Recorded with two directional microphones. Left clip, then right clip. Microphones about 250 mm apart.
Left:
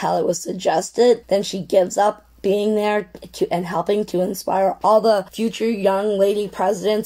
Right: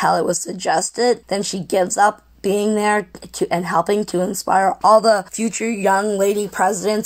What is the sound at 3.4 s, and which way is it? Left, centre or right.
Speech, centre.